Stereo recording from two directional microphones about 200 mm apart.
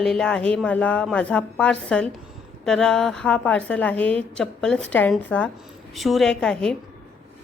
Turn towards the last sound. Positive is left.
turn(degrees=5)  # may be behind; listen again after turning